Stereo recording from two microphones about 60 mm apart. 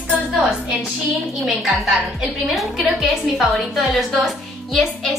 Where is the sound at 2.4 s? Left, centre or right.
Centre.